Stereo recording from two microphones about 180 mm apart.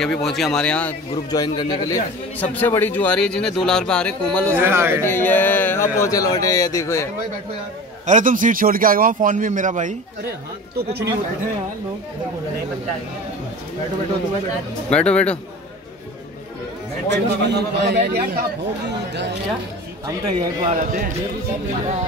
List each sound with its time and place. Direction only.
0.0 s speech: 5° left (ahead or behind)
1.1 s speech: 25° left (ahead or behind)
2.5 s speech: 10° left (ahead or behind)
4.6 s speech: 10° right (ahead or behind)
5.0 s a man's voice: 10° left (ahead or behind)
8.1 s a man's voice: 45° right (ahead or behind)
14.9 s a man's voice: 5° left (ahead or behind)
17.1 s a man's voice: 70° right (ahead or behind)
20.7 s a man's voice: 45° right (ahead or behind)